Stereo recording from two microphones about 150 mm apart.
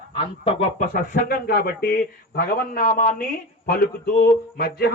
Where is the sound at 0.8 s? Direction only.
65° left (ahead or behind).